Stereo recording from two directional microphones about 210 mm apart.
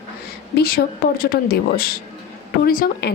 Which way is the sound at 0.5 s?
45° left (ahead or behind).